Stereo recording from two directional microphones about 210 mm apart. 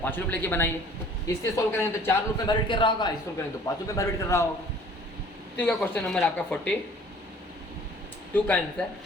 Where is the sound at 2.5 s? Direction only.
20° left (ahead or behind).